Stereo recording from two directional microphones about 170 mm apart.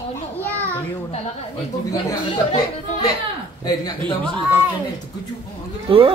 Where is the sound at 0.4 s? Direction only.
10° left (ahead or behind).